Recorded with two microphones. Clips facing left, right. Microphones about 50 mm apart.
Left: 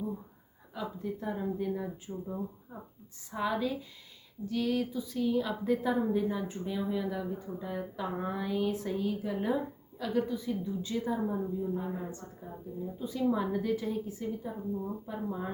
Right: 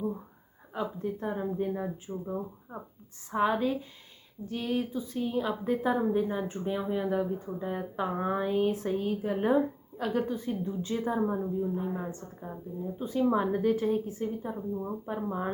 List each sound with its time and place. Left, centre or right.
0.7 s speech: right
4.4 s a woman's voice: right